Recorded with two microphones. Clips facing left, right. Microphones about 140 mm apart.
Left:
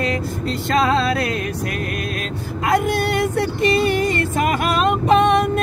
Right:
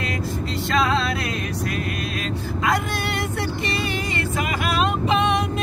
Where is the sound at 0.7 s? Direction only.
45° left (ahead or behind).